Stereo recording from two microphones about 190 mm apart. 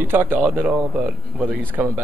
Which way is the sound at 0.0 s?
10° right (ahead or behind).